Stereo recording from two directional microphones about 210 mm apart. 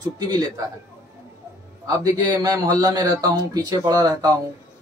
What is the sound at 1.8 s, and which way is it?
A man's voice, 15° right (ahead or behind).